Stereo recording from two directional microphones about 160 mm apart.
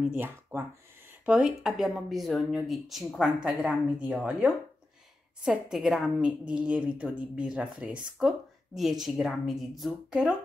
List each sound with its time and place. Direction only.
0.1 s a woman's voice: 15° right (ahead or behind)